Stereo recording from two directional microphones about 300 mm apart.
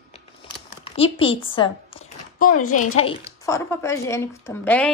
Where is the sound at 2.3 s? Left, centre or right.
Left.